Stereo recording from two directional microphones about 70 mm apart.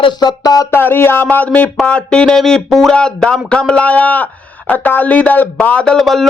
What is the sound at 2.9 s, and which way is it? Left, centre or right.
Speech, centre.